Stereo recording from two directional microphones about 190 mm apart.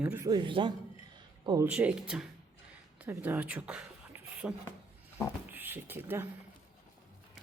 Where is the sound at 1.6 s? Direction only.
5° right (ahead or behind).